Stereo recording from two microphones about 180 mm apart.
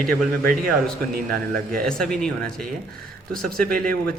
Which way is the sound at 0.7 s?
5° left (ahead or behind).